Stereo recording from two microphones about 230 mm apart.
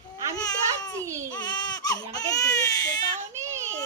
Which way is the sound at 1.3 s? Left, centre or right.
Centre.